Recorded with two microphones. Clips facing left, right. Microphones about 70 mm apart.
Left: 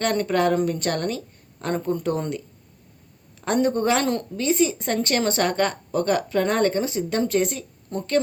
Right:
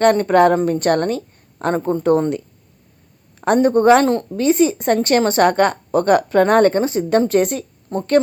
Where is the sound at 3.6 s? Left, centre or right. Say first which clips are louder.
Right 11 dB; right.